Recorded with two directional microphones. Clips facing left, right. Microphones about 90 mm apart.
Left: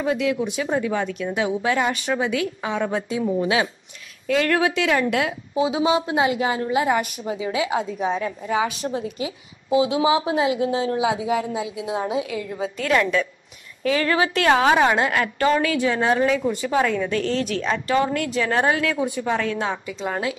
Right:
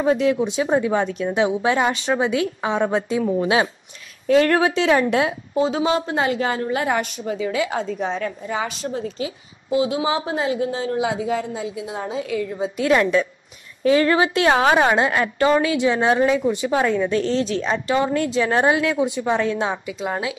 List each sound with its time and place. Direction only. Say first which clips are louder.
0.0 s a woman's voice: right 4 dB; 30° right (ahead or behind)
5.5 s a woman's voice: left 2 dB; 10° left (ahead or behind)
12.7 s a woman's voice: right 3 dB; 25° right (ahead or behind)
20.0 s speech: right 1 dB; 10° right (ahead or behind)